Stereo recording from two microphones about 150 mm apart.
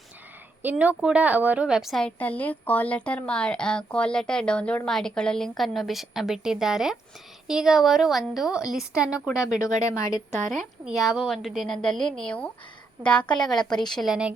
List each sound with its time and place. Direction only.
0.6 s a woman's voice: 10° right (ahead or behind)
9.3 s speech: 20° left (ahead or behind)
10.5 s a woman's voice: centre (ahead or behind)